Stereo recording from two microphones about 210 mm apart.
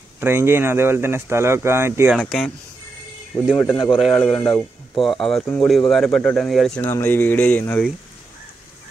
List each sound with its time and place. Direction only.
0.2 s speech: 10° right (ahead or behind)
3.9 s speech: centre (ahead or behind)